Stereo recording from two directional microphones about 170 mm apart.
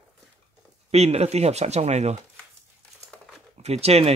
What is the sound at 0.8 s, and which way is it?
Speech, 40° right (ahead or behind).